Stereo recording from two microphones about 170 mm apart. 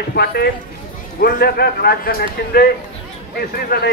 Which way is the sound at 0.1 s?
70° left (ahead or behind).